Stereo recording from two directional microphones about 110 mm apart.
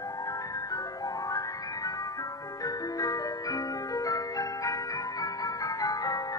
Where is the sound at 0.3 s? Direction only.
35° left (ahead or behind).